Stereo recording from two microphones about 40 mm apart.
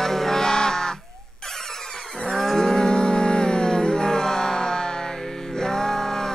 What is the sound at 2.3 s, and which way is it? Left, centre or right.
Music, centre.